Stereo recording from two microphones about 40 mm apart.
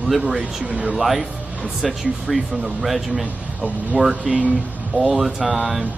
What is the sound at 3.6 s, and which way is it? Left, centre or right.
Speech, right.